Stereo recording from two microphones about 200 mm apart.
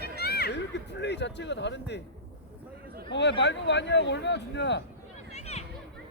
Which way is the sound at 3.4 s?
60° left (ahead or behind).